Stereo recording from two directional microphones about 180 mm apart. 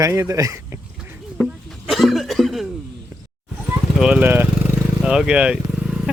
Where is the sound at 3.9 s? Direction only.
5° right (ahead or behind).